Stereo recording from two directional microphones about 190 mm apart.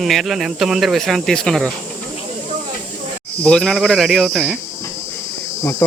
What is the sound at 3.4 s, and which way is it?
Speech, 5° left (ahead or behind).